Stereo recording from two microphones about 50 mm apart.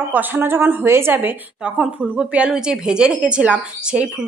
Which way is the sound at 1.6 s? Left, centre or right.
Right.